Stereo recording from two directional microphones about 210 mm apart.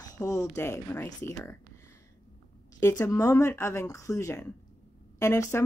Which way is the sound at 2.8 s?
15° left (ahead or behind).